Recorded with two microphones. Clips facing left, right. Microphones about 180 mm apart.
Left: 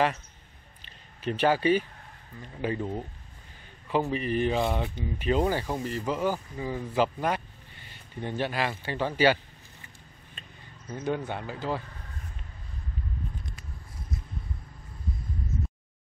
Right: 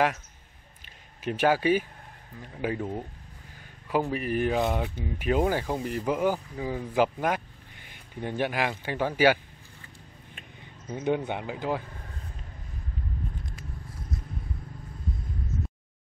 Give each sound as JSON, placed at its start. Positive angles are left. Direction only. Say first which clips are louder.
{"t": 1.2, "sound": "speech", "louder": "even", "side_deg": -10}